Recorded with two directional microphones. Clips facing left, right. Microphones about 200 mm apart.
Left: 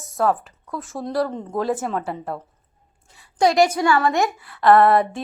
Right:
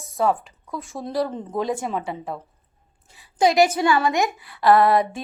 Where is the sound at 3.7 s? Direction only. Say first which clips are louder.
Left 1 dB; 20° right (ahead or behind).